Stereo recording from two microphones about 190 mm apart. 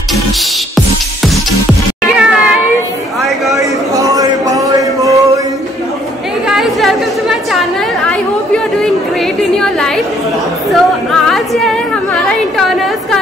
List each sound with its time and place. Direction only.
2.1 s cat: 5° right (ahead or behind)
3.2 s chatter: centre (ahead or behind)
3.5 s a sound: 15° right (ahead or behind)
6.4 s a sound: centre (ahead or behind)
8.7 s chatter: centre (ahead or behind)
10.7 s music: centre (ahead or behind)